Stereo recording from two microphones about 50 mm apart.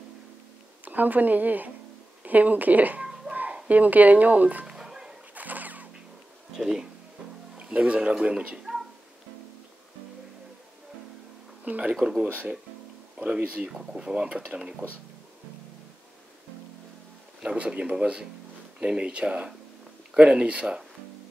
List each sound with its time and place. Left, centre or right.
0.8 s speech: right
4.6 s music: centre
5.3 s zipper: right
6.5 s speech: centre
7.5 s speech: right
11.6 s speech: right
12.0 s speech: centre
13.4 s speech: right
13.7 s speech: centre
17.4 s speech: centre